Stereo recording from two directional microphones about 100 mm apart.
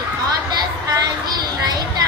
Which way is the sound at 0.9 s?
40° right (ahead or behind).